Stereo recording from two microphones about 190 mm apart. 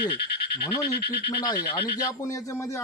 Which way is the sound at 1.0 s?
60° left (ahead or behind).